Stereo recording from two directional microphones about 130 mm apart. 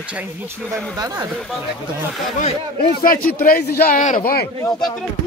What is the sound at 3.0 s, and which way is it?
A man's voice, 90° left.